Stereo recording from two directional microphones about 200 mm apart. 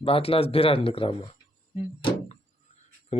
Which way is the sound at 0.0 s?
30° left (ahead or behind).